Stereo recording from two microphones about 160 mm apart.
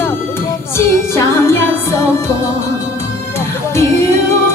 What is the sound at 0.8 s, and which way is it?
Music, 15° left (ahead or behind).